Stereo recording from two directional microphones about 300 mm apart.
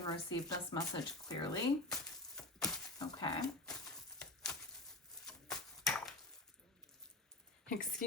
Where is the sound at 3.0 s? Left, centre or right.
Centre.